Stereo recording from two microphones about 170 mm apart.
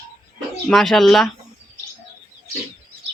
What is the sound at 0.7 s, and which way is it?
Speech, centre (ahead or behind).